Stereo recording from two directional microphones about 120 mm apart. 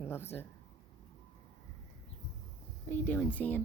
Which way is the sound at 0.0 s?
20° left (ahead or behind).